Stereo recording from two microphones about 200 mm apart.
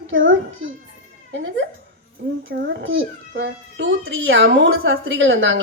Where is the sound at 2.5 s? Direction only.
55° right (ahead or behind).